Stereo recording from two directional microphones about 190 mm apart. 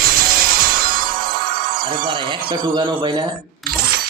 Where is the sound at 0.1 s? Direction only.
50° right (ahead or behind).